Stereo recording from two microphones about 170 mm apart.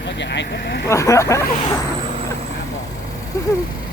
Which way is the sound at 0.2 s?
85° left.